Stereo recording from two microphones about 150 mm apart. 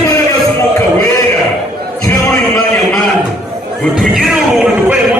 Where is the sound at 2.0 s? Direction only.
20° left (ahead or behind).